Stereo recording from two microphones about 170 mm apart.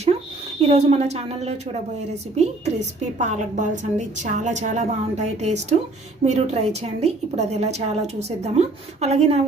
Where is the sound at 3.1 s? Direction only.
45° right (ahead or behind).